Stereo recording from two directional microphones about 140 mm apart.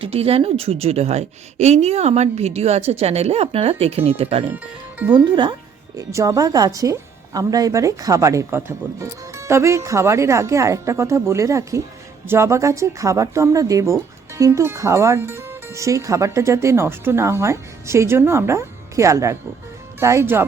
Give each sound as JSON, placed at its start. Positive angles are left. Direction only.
{"t": 0.0, "sound": "a woman's voice", "side_deg": -45}
{"t": 4.5, "sound": "speech", "side_deg": -10}
{"t": 5.1, "sound": "speech", "side_deg": -35}
{"t": 6.0, "sound": "a woman's voice", "side_deg": -25}